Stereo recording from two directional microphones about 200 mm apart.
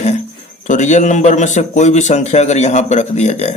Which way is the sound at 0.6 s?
35° left (ahead or behind).